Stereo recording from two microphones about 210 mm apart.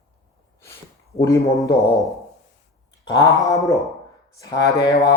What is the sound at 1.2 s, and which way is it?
Speech, 15° left (ahead or behind).